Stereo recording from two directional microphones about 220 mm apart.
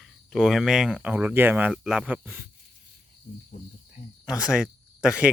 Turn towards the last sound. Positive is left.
turn(degrees=-5)  # may be behind; listen again after turning